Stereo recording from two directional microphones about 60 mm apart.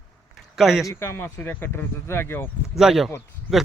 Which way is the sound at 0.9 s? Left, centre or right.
Left.